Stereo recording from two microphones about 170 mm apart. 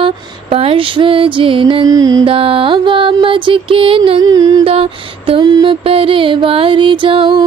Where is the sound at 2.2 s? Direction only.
30° right (ahead or behind).